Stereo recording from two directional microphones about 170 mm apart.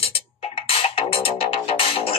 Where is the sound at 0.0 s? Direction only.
35° left (ahead or behind).